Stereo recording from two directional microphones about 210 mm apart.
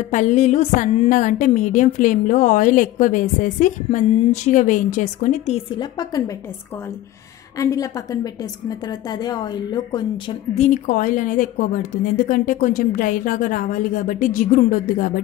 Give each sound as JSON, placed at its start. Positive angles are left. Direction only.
{"t": 0.1, "sound": "a woman's voice", "side_deg": 35}
{"t": 5.8, "sound": "a woman's voice", "side_deg": 20}
{"t": 7.5, "sound": "a woman's voice", "side_deg": 15}